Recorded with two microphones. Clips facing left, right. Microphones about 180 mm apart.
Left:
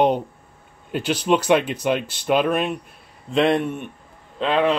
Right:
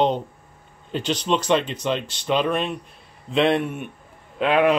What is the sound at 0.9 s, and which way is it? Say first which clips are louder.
Speech: left 3 dB; 10° left (ahead or behind).